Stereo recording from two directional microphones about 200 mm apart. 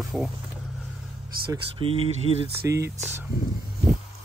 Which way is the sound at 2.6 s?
15° right (ahead or behind).